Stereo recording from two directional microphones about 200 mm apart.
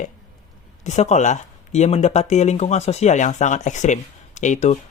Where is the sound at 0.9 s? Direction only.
35° left (ahead or behind).